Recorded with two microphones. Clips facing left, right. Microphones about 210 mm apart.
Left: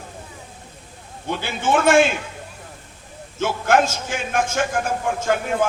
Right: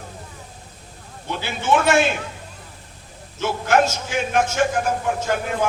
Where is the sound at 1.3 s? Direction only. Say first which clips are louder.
Even; 50° left (ahead or behind).